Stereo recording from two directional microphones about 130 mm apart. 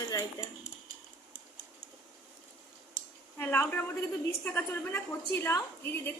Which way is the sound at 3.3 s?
15° left (ahead or behind).